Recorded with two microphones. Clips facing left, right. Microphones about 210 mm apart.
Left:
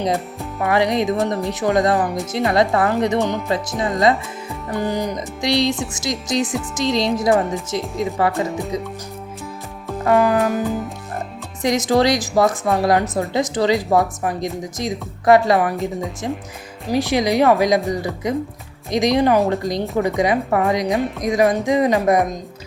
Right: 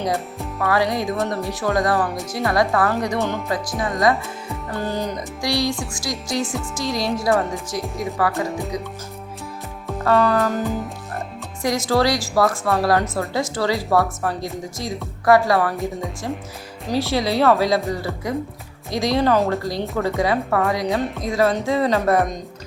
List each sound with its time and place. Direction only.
0.6 s a woman's voice: 20° left (ahead or behind)
8.4 s speech: centre (ahead or behind)
10.0 s speech: 15° left (ahead or behind)
11.6 s a woman's voice: 20° left (ahead or behind)
16.9 s speech: 15° left (ahead or behind)